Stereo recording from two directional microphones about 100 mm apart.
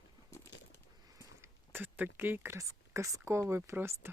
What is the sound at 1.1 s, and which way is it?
Speech, 30° right (ahead or behind).